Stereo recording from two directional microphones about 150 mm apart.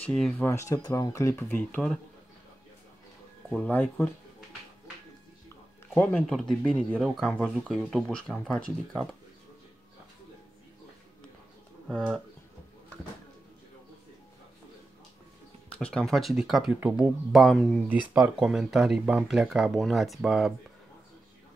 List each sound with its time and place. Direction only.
0.0 s speech: 5° left (ahead or behind)
0.5 s speech: 20° left (ahead or behind)
3.4 s speech: 10° left (ahead or behind)
5.9 s speech: 5° left (ahead or behind)
11.9 s speech: 5° left (ahead or behind)
15.8 s speech: 5° left (ahead or behind)
17.8 s speech: 10° right (ahead or behind)